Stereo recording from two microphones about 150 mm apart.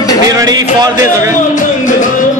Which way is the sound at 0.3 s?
25° right (ahead or behind).